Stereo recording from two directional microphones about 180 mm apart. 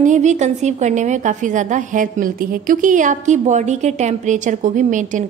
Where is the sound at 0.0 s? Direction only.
40° right (ahead or behind).